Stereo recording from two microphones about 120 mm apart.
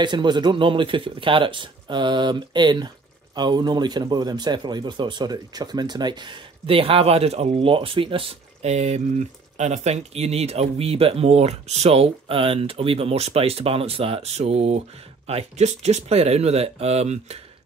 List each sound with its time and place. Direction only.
0.0 s speech: 40° right (ahead or behind); by 17.4 s 60° right (ahead or behind)